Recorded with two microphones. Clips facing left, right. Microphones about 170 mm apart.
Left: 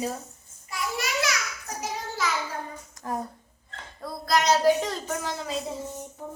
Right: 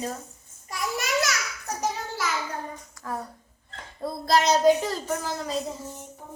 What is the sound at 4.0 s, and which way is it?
Speech, 25° right (ahead or behind).